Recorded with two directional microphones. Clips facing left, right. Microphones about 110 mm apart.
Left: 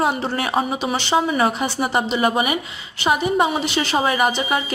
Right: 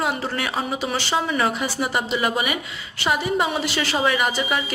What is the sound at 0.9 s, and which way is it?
Speech, 25° left (ahead or behind).